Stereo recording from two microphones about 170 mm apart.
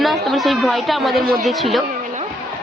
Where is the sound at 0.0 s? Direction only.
Centre (ahead or behind).